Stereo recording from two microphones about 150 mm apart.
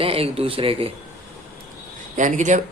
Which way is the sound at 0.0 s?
40° right (ahead or behind).